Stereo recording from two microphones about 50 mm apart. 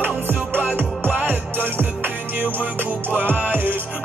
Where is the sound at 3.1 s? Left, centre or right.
Right.